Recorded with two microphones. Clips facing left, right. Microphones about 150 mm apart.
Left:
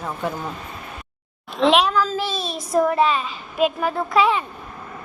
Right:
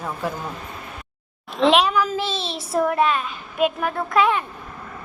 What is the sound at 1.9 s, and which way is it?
Speech, 15° right (ahead or behind).